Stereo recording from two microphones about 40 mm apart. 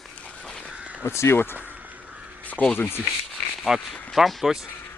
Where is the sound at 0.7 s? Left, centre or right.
Right.